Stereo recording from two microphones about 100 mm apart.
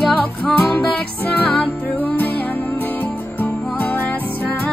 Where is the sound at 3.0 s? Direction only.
20° left (ahead or behind).